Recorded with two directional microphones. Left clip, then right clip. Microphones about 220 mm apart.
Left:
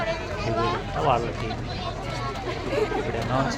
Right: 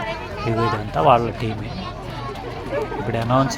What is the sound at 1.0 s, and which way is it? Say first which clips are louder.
Speech: right 8 dB; 35° right (ahead or behind).